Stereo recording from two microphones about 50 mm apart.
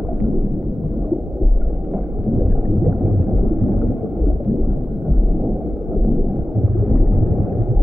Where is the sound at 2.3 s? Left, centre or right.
Centre.